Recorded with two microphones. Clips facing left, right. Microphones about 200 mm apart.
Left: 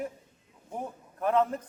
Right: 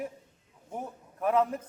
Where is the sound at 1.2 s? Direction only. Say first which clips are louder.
Even; 5° right (ahead or behind).